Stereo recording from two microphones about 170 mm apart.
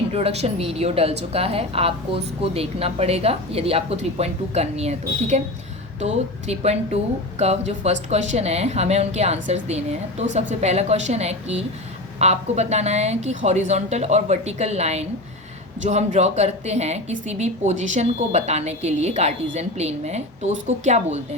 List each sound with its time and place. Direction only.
0.1 s a woman's voice: 35° right (ahead or behind)